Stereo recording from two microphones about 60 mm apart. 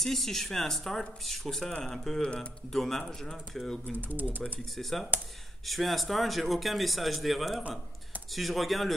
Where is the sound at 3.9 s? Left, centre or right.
Right.